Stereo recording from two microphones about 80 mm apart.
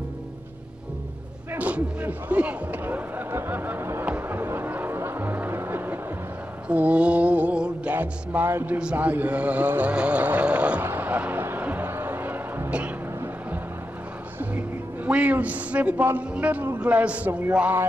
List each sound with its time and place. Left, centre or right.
1.5 s speech: centre
4.0 s music: right
6.7 s mantra: centre
7.9 s speech: right
8.7 s speech: centre
10.9 s music: right
15.0 s speech: centre
16.8 s mantra: centre